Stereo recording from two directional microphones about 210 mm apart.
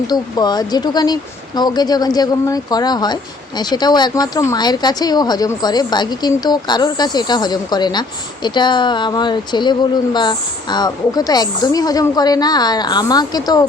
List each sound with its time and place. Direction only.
0.1 s speech: 20° left (ahead or behind)